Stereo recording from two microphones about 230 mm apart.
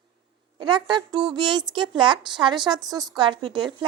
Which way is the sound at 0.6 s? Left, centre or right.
Centre.